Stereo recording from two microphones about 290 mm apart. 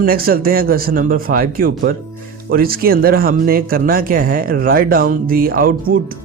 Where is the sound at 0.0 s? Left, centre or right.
Right.